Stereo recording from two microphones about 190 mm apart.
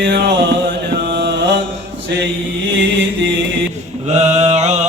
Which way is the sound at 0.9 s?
65° right (ahead or behind).